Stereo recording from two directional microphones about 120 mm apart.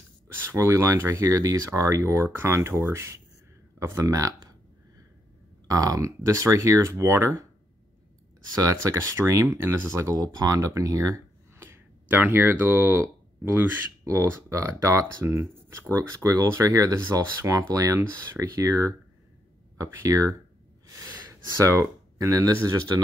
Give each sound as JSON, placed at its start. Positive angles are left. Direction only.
{"t": 0.5, "sound": "speech", "side_deg": -20}
{"t": 5.7, "sound": "speech", "side_deg": -30}
{"t": 8.5, "sound": "speech", "side_deg": -25}
{"t": 20.8, "sound": "gasp", "side_deg": -25}